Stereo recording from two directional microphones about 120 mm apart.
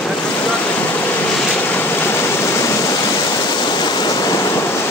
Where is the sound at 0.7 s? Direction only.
15° left (ahead or behind).